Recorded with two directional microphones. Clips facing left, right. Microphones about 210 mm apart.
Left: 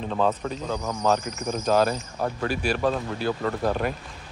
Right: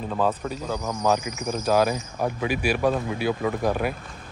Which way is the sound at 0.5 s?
10° right (ahead or behind).